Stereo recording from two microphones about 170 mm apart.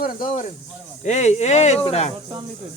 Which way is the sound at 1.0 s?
40° left (ahead or behind).